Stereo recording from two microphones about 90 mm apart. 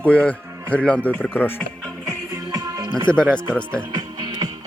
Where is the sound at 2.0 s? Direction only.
35° right (ahead or behind).